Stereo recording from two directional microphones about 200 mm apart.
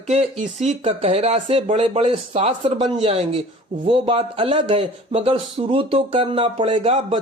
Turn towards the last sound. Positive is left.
turn(degrees=-30)  # may be behind; listen again after turning